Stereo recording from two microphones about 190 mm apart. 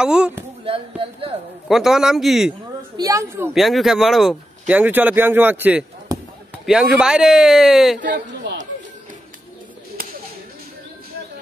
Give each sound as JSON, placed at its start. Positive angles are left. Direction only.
{"t": 0.0, "sound": "speech", "side_deg": -5}
{"t": 0.7, "sound": "speech", "side_deg": -30}
{"t": 1.7, "sound": "speech", "side_deg": 0}
{"t": 3.0, "sound": "speech", "side_deg": -15}
{"t": 3.5, "sound": "speech", "side_deg": 0}
{"t": 8.0, "sound": "speech", "side_deg": -65}